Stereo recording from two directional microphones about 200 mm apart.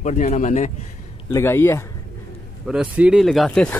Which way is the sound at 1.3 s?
15° left (ahead or behind).